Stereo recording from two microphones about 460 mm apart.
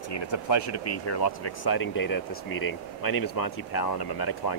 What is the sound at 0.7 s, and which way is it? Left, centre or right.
Speech, left.